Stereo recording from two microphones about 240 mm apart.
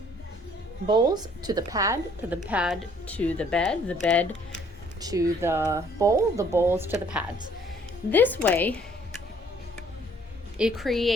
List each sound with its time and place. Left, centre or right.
0.9 s speech: centre
3.1 s speech: centre
4.9 s speech: centre
8.1 s a woman's voice: centre
10.6 s speech: centre